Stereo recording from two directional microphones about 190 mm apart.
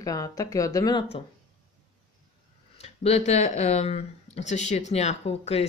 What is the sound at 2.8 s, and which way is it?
Speech, 35° left (ahead or behind).